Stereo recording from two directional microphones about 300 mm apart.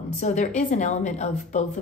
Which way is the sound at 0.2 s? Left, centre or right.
Left.